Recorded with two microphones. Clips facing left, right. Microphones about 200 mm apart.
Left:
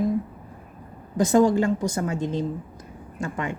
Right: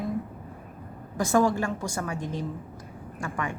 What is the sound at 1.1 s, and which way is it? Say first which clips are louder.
A woman's voice: left 5 dB; 20° left (ahead or behind).